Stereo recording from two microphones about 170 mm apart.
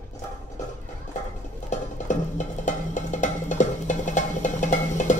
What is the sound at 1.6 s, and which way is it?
Music, 45° left (ahead or behind).